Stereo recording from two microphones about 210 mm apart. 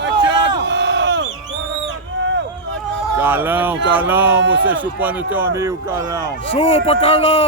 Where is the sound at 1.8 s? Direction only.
60° right (ahead or behind).